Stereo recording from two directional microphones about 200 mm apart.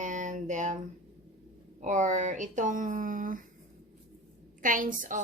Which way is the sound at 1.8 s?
40° right (ahead or behind).